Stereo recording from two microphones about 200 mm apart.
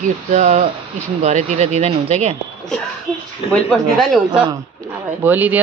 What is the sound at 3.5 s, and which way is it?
Speech, centre (ahead or behind).